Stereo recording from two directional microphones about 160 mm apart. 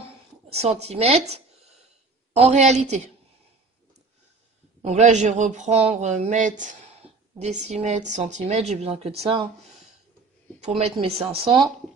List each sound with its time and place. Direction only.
0.5 s a woman's voice: 40° right (ahead or behind)
4.8 s a woman's voice: 45° right (ahead or behind)
10.8 s a woman's voice: 40° right (ahead or behind)